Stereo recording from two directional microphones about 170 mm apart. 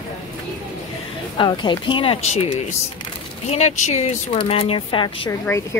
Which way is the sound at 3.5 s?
45° left (ahead or behind).